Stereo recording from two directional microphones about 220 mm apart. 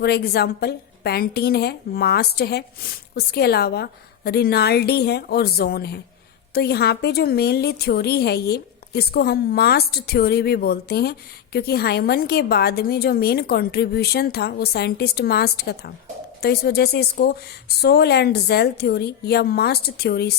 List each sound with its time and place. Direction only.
0.0 s a woman's voice: 45° left (ahead or behind)